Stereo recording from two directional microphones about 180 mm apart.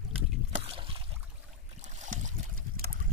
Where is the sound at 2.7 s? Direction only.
55° right (ahead or behind).